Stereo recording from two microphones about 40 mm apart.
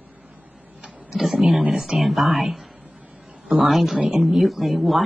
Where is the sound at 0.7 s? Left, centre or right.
Right.